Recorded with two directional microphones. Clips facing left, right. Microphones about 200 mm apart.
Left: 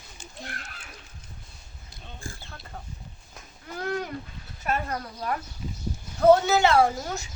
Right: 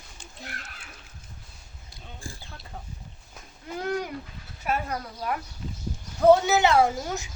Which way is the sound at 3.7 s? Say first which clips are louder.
Right 1 dB; 10° right (ahead or behind).